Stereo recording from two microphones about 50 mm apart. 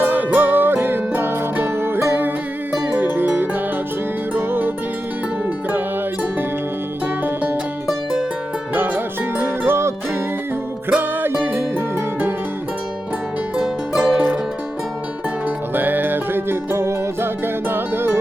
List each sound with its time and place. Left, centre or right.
0.0 s music: right
7.3 s music: right
8.7 s music: right
9.4 s music: right
10.8 s music: right
13.6 s music: centre
15.7 s music: right